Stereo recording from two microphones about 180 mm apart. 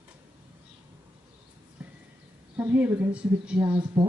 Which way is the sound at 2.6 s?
10° right (ahead or behind).